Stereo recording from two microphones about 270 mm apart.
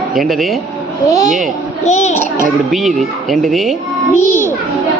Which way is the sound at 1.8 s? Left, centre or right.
Left.